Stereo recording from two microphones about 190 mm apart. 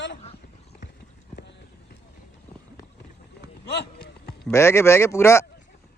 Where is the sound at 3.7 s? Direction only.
55° left (ahead or behind).